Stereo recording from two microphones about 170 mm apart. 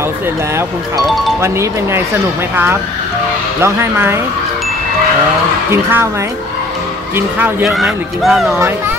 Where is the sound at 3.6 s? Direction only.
15° right (ahead or behind).